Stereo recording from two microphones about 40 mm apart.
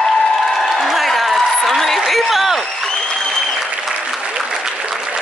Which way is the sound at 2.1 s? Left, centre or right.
Centre.